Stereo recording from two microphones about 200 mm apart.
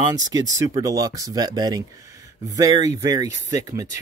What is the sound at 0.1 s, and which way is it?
Speech, 20° right (ahead or behind).